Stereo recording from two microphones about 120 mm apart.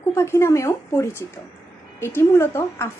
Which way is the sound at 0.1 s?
20° left (ahead or behind).